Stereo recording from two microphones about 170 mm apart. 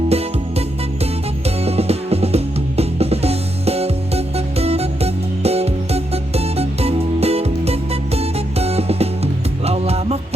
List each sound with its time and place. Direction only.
0.1 s music: 35° right (ahead or behind)